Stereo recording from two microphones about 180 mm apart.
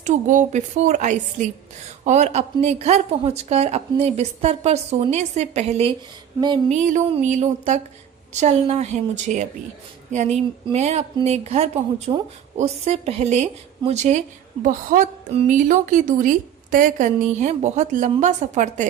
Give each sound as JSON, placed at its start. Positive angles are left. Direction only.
{"t": 0.0, "sound": "a woman's voice", "side_deg": -45}